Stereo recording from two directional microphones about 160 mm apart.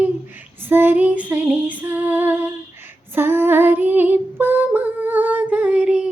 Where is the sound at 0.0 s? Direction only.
10° right (ahead or behind).